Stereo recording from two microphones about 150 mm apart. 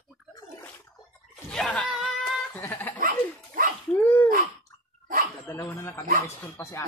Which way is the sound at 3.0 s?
70° right (ahead or behind).